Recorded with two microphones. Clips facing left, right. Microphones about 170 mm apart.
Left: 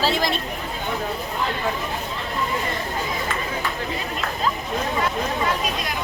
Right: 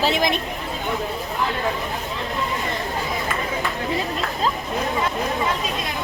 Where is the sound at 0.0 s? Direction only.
20° right (ahead or behind).